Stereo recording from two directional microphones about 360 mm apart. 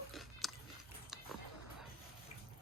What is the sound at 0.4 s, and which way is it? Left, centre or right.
Chewing, centre.